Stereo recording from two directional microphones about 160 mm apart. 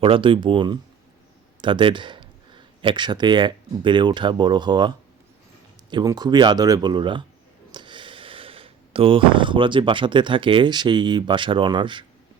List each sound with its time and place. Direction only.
0.0 s speech: 35° right (ahead or behind)